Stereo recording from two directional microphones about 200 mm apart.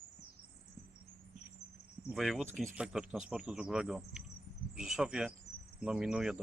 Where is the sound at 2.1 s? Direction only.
Centre (ahead or behind).